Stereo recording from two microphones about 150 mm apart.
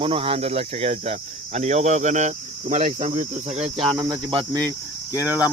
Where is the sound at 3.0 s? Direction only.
50° right (ahead or behind).